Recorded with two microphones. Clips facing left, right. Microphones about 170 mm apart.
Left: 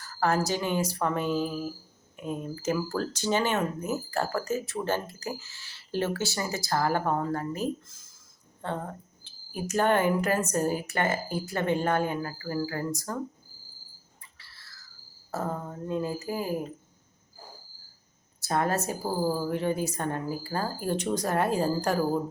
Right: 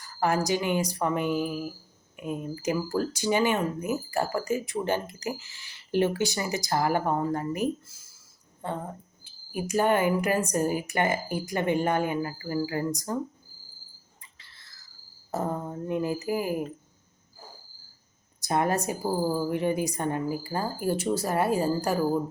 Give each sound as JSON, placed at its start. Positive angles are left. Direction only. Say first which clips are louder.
{"t": 0.0, "sound": "speech", "louder": "even", "side_deg": -15}
{"t": 14.3, "sound": "a sound", "louder": "left 1 dB", "side_deg": -20}
{"t": 15.3, "sound": "speech", "louder": "right 2 dB", "side_deg": -20}
{"t": 18.3, "sound": "a woman's voice", "louder": "right 1 dB", "side_deg": -15}